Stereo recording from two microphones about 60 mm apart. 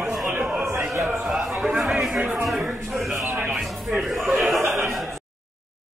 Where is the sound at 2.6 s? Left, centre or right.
Centre.